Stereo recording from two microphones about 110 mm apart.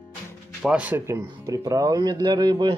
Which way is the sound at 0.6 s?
10° right (ahead or behind).